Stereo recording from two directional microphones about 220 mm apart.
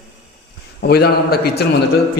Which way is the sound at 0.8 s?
45° left (ahead or behind).